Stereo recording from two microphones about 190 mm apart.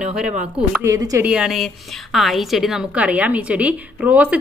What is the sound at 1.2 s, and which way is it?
A woman's voice, 5° right (ahead or behind).